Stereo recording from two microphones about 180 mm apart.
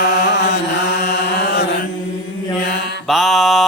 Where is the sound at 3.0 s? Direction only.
Centre (ahead or behind).